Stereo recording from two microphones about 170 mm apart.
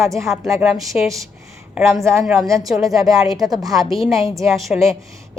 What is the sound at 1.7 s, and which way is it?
A woman's voice, 10° right (ahead or behind).